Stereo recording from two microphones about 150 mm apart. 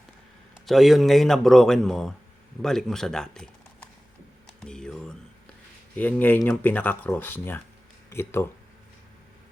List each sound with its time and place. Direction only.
0.6 s speech: centre (ahead or behind)
4.6 s a sound: 5° left (ahead or behind)
6.0 s speech: 10° left (ahead or behind)